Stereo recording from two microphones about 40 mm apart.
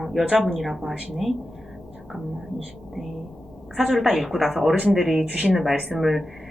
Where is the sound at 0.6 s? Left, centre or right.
Centre.